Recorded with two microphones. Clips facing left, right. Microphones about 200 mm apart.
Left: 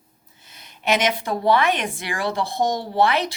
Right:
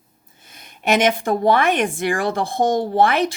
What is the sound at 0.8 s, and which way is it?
Speech, 50° right (ahead or behind).